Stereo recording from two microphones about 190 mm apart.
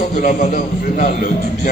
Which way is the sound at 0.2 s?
40° left (ahead or behind).